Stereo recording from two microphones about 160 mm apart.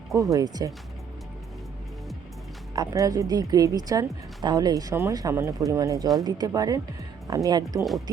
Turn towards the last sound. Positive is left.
turn(degrees=-25)  # may be behind; listen again after turning